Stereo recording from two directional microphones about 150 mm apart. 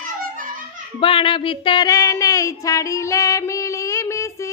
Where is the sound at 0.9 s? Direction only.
35° left (ahead or behind).